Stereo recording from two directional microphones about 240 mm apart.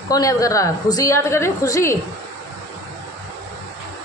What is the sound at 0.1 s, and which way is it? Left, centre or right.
A woman's voice, centre.